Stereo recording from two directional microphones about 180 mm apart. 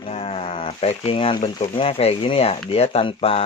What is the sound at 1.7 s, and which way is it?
Speech, 30° left (ahead or behind).